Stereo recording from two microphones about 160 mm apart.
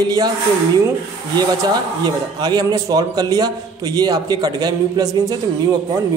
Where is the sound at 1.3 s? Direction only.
25° right (ahead or behind).